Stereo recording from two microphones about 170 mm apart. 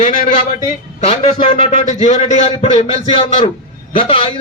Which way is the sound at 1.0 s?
35° left (ahead or behind).